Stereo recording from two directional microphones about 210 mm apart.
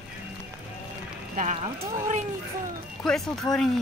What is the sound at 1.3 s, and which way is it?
Speech, 35° right (ahead or behind).